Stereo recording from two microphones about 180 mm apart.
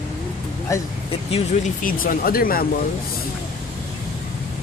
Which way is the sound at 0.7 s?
15° left (ahead or behind).